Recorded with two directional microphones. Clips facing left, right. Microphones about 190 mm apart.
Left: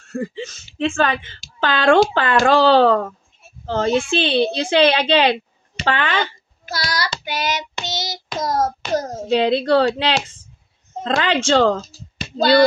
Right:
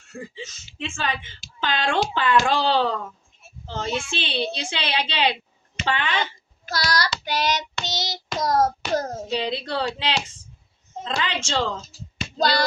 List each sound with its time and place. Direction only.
0.1 s a woman's voice: 55° left (ahead or behind)
6.6 s child singing: centre (ahead or behind)
9.3 s a woman's voice: 65° left (ahead or behind)